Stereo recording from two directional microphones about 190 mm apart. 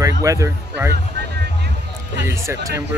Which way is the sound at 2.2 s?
15° right (ahead or behind).